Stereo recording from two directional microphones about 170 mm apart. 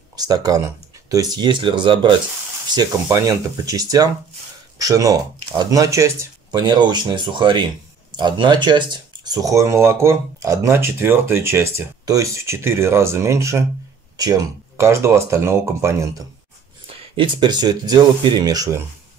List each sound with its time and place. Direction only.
0.1 s speech: 20° right (ahead or behind)
16.8 s speech: 30° right (ahead or behind)